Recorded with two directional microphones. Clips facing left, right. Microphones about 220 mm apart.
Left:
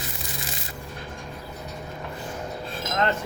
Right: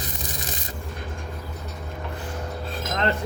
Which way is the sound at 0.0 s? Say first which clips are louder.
Right 2 dB; 40° right (ahead or behind).